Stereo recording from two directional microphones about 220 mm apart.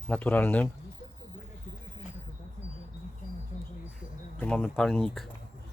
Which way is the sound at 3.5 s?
35° left (ahead or behind).